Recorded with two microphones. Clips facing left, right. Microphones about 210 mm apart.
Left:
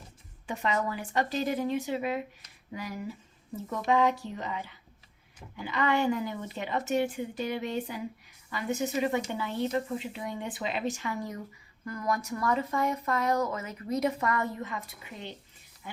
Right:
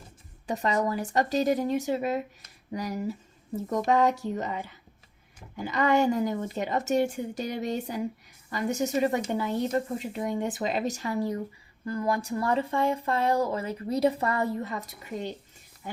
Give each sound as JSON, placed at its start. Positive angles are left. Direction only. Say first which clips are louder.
{"t": 0.4, "sound": "a woman's voice", "louder": "right 4 dB", "side_deg": -40}